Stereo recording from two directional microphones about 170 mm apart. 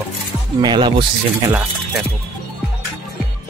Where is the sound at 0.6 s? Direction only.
25° right (ahead or behind).